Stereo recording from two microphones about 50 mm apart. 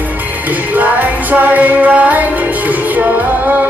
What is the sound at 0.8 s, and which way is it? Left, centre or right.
Music, right.